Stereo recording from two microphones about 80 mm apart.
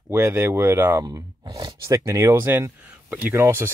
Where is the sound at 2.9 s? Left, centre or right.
Centre.